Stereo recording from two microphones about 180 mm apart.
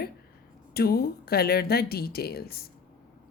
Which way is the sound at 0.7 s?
60° left (ahead or behind).